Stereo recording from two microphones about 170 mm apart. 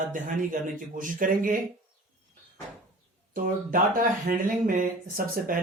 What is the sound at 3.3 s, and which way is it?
Speech, 55° right (ahead or behind).